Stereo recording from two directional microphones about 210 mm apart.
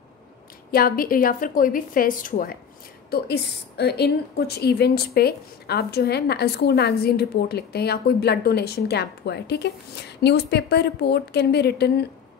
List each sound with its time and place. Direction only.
0.7 s a woman's voice: 45° left (ahead or behind)